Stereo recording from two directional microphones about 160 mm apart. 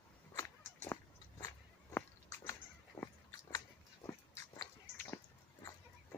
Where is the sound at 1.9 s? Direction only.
20° left (ahead or behind).